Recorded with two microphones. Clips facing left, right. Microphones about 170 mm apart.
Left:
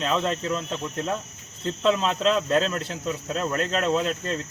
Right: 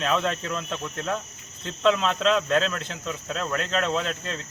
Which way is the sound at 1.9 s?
35° left (ahead or behind).